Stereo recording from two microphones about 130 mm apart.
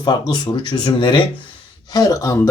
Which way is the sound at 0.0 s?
30° left (ahead or behind).